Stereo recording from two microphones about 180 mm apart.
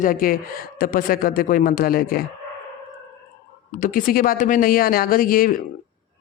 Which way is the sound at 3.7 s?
45° left (ahead or behind).